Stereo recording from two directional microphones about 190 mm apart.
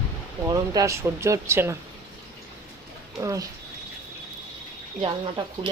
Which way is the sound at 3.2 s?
15° right (ahead or behind).